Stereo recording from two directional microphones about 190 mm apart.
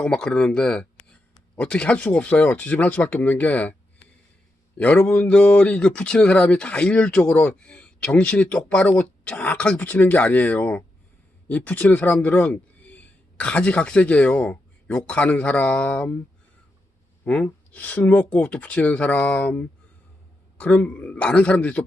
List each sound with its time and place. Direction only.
0.0 s speech: 5° left (ahead or behind)
4.8 s speech: 10° left (ahead or behind)
17.2 s speech: 5° left (ahead or behind)